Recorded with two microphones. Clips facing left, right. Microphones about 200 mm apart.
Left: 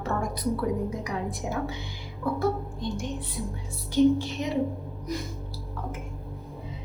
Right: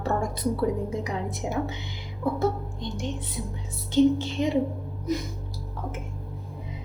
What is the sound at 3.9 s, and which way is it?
Speech, 25° right (ahead or behind).